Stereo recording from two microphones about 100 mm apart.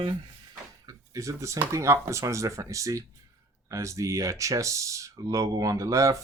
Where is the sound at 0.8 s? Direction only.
30° right (ahead or behind).